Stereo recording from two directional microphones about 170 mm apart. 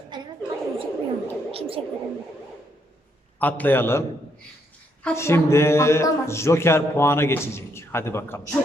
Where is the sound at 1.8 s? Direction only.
35° right (ahead or behind).